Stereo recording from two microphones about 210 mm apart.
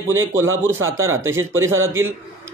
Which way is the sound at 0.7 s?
70° right (ahead or behind).